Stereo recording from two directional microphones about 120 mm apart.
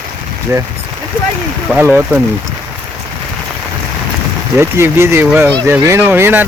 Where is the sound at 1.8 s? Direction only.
20° right (ahead or behind).